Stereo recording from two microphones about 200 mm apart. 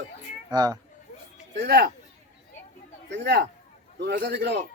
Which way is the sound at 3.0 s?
60° right (ahead or behind).